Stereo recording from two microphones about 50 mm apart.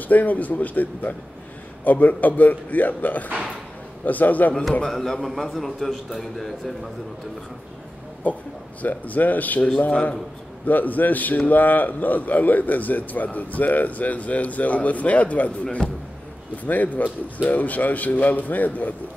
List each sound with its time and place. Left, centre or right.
0.1 s speech: left
4.8 s a man's voice: centre
8.3 s speech: left